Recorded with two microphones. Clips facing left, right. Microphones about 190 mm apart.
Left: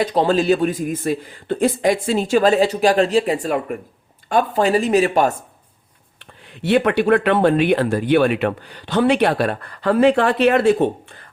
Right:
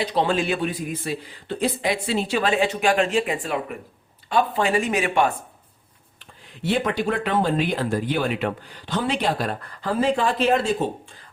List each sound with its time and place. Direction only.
0.0 s a man's voice: 45° left (ahead or behind)
6.1 s speech: 65° left (ahead or behind)